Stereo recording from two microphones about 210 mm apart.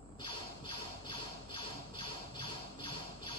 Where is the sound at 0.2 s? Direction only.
25° left (ahead or behind).